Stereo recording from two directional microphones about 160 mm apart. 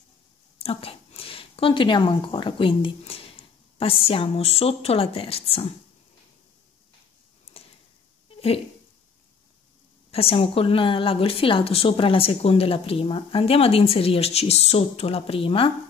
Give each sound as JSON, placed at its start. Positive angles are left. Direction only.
{"t": 0.6, "sound": "a woman's voice", "side_deg": 35}
{"t": 10.1, "sound": "a woman's voice", "side_deg": 35}